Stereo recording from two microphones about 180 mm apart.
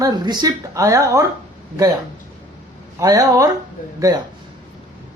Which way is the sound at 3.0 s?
20° right (ahead or behind).